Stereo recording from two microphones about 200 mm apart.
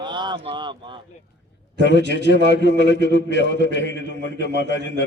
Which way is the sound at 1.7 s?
60° left (ahead or behind).